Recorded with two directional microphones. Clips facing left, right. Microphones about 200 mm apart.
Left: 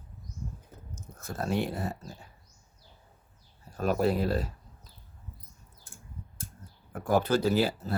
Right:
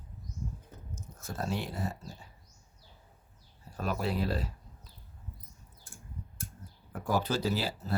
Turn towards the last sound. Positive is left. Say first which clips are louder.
# left 6 dB
turn(degrees=55)  # may be behind; listen again after turning